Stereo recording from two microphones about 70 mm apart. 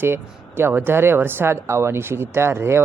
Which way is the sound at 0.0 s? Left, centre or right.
Right.